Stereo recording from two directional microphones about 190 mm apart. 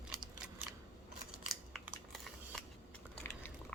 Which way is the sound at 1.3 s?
Centre (ahead or behind).